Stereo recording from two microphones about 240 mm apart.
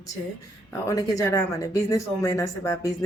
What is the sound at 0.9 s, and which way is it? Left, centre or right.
Speech, centre.